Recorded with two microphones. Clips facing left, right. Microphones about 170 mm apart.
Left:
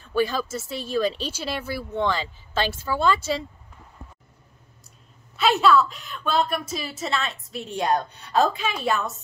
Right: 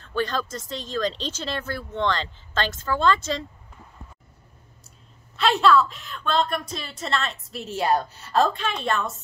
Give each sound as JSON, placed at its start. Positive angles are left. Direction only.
{"t": 0.0, "sound": "speech", "side_deg": 10}
{"t": 5.3, "sound": "a woman's voice", "side_deg": 0}